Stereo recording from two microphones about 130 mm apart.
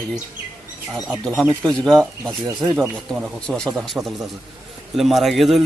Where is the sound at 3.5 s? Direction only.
5° left (ahead or behind).